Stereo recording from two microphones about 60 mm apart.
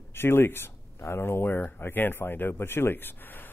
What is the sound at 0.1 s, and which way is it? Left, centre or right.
Speech, left.